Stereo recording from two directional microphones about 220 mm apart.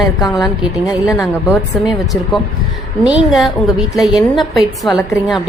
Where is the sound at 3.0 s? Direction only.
Centre (ahead or behind).